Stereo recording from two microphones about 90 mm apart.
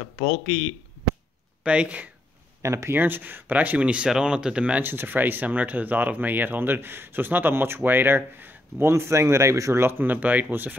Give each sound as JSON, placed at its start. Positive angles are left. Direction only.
{"t": 1.6, "sound": "speech", "side_deg": -15}
{"t": 2.6, "sound": "speech", "side_deg": -35}